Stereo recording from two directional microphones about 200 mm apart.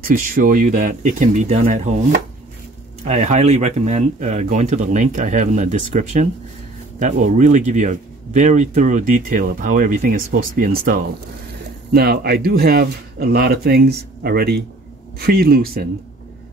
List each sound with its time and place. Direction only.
0.0 s speech: 45° right (ahead or behind)